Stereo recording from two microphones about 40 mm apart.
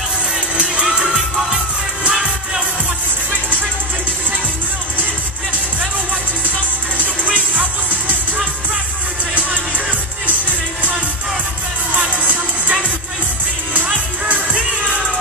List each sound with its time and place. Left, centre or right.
0.8 s music: centre
14.2 s music: right